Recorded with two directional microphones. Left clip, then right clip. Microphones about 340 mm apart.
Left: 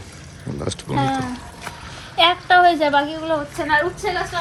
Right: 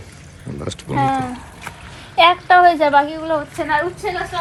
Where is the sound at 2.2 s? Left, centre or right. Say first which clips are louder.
Right 3 dB; right.